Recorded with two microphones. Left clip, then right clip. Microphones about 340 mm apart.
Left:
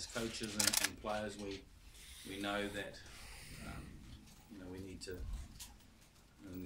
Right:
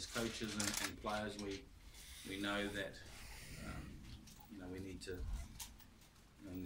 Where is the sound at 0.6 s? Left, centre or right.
Left.